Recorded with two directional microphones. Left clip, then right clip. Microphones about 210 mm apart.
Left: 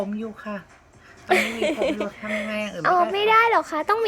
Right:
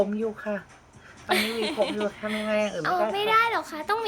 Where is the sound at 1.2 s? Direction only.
15° left (ahead or behind).